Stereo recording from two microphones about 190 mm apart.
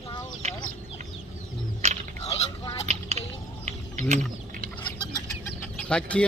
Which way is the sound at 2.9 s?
35° right (ahead or behind).